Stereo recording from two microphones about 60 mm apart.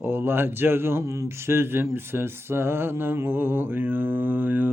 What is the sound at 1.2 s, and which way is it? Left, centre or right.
Mantra, right.